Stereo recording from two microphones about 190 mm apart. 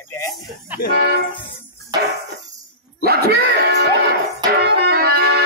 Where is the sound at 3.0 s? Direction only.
55° right (ahead or behind).